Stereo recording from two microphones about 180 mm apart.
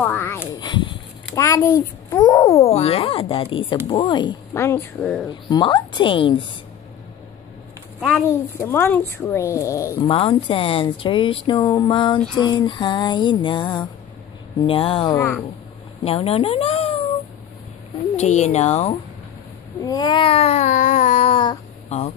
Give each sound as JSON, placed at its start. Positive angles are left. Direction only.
{"t": 0.0, "sound": "speech", "side_deg": 10}
{"t": 0.5, "sound": "a child's voice", "side_deg": 25}
{"t": 2.6, "sound": "speech", "side_deg": 35}
{"t": 4.6, "sound": "speech", "side_deg": 15}
{"t": 5.3, "sound": "speech", "side_deg": 25}
{"t": 8.1, "sound": "speech", "side_deg": 10}
{"t": 10.0, "sound": "speech", "side_deg": 30}
{"t": 15.1, "sound": "speech", "side_deg": 10}
{"t": 16.0, "sound": "speech", "side_deg": 35}
{"t": 18.1, "sound": "speech", "side_deg": 40}
{"t": 19.8, "sound": "a sound", "side_deg": 20}